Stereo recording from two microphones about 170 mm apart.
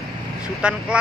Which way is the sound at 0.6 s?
5° right (ahead or behind).